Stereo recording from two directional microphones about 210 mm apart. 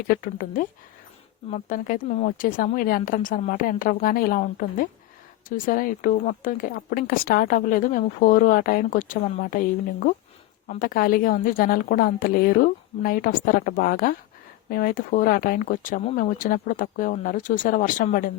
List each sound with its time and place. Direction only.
0.1 s a woman's voice: 40° left (ahead or behind)